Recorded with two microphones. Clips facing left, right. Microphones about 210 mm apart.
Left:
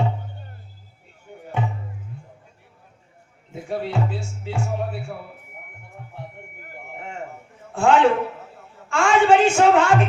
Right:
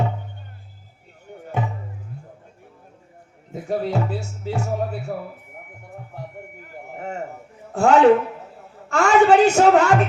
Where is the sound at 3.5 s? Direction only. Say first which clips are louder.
Right 3 dB; 40° right (ahead or behind).